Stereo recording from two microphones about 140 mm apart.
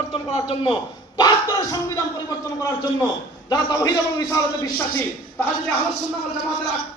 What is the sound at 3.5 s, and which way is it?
A man's voice, 30° left (ahead or behind).